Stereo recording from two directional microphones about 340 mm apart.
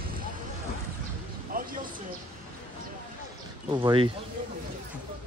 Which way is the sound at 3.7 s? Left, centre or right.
Centre.